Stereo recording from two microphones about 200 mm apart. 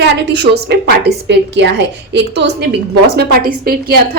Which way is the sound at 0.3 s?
55° right (ahead or behind).